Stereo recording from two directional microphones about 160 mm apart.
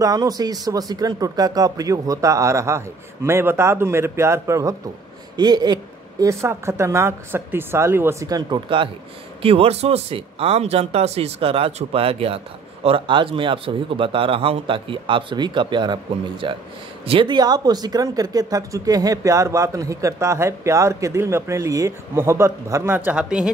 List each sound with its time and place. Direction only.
0.0 s a man's voice: 20° right (ahead or behind); by 23.5 s 5° right (ahead or behind)